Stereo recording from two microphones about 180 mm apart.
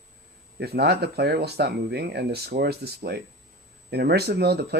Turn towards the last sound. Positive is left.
turn(degrees=-60)  # may be behind; listen again after turning